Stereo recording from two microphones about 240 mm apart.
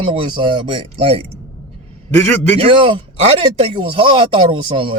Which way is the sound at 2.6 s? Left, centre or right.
Right.